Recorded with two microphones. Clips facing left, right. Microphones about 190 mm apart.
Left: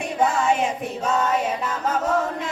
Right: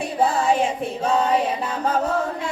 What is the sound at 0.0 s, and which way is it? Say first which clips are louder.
Music: right 1 dB; 35° right (ahead or behind).